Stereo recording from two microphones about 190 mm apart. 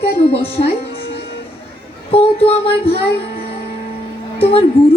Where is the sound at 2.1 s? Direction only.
30° left (ahead or behind).